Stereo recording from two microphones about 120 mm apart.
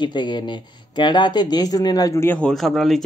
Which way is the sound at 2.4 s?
Centre (ahead or behind).